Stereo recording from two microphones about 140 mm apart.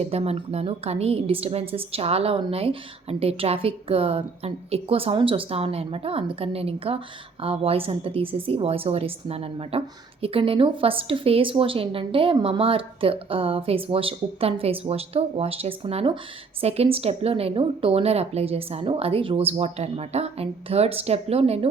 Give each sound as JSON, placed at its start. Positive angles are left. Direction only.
{"t": 0.0, "sound": "a woman's voice", "side_deg": -45}